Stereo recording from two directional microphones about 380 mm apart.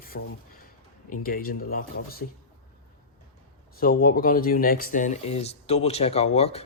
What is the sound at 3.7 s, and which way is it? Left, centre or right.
Speech, left.